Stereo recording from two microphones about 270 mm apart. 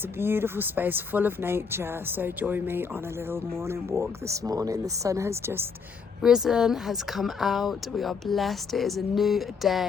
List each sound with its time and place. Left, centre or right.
0.2 s speech: centre